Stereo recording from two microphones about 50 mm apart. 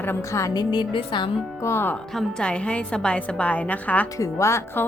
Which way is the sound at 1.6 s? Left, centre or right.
Left.